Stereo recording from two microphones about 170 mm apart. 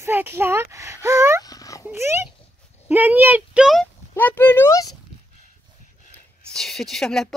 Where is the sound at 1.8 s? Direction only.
15° right (ahead or behind).